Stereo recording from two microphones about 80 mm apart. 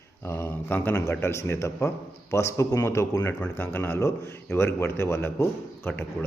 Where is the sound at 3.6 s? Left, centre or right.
Left.